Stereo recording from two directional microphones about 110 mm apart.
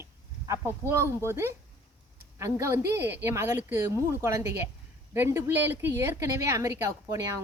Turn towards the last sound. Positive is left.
turn(degrees=-30)  # may be behind; listen again after turning